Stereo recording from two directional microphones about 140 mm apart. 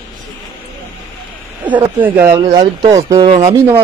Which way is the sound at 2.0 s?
15° right (ahead or behind).